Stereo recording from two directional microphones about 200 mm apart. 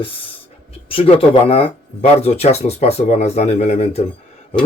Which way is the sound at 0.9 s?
30° left (ahead or behind).